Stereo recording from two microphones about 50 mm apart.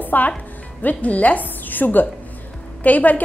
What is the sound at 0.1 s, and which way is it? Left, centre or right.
A woman's voice, left.